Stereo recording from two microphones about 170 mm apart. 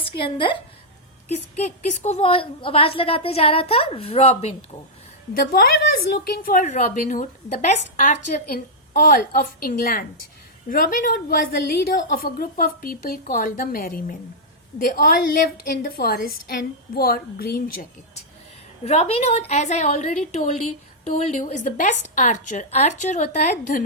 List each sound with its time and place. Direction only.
0.2 s a woman's voice: 30° left (ahead or behind)
1.3 s a woman's voice: 40° left (ahead or behind)
5.3 s a woman's voice: 55° left (ahead or behind)
18.9 s a woman's voice: 35° left (ahead or behind)